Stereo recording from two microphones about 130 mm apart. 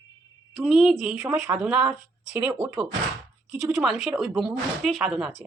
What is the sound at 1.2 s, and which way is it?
Speech, 20° right (ahead or behind).